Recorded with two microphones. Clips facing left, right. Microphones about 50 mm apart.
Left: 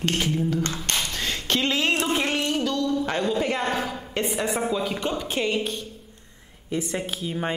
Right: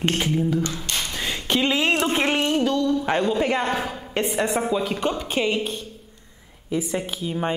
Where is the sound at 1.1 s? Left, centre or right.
Centre.